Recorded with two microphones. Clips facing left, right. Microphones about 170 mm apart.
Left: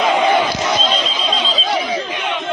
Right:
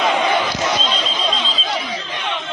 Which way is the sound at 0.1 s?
50° left (ahead or behind).